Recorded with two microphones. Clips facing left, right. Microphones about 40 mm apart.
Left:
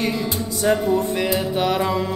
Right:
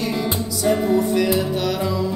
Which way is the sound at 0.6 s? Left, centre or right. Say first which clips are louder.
Even; left.